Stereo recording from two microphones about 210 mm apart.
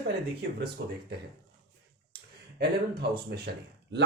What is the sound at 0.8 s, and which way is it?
Speech, 50° right (ahead or behind).